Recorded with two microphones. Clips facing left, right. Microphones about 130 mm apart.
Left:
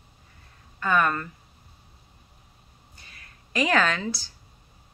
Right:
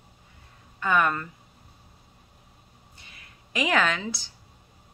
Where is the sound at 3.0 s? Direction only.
15° right (ahead or behind).